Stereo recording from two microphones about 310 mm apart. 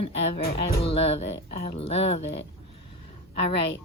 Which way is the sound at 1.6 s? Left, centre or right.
Centre.